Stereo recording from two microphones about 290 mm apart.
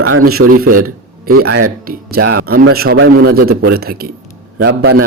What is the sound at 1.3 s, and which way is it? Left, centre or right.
Speech, right.